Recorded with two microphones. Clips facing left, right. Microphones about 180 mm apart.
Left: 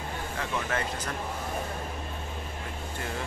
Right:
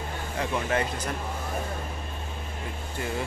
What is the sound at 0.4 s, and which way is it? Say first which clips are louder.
Speech: right 5 dB; 15° right (ahead or behind).